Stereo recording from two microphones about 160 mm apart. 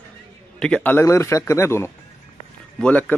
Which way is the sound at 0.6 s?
5° left (ahead or behind).